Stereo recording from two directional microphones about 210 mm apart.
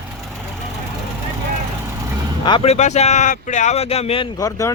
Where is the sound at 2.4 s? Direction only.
25° left (ahead or behind).